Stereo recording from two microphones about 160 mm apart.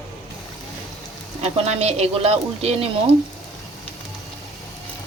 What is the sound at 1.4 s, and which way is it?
Speech, 40° right (ahead or behind).